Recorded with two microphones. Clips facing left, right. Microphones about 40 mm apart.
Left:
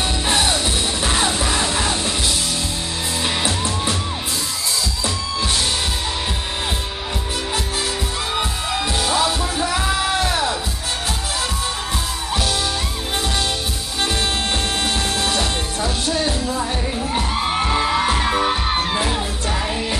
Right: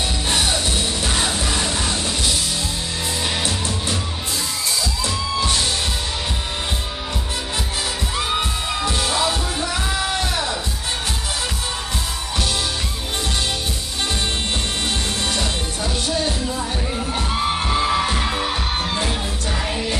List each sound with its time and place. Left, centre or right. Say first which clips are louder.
0.3 s music: left 2 dB; centre
3.4 s music: left 3 dB; centre
5.0 s music: right 3 dB; centre
8.4 s music: left 1 dB; centre
9.6 s music: left 3 dB; centre
15.2 s music: left 2 dB; centre